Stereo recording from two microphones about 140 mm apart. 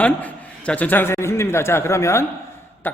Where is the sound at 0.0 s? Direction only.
10° left (ahead or behind).